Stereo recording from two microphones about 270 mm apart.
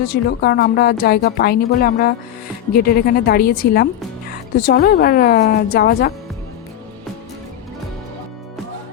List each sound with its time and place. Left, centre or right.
0.1 s a woman's voice: left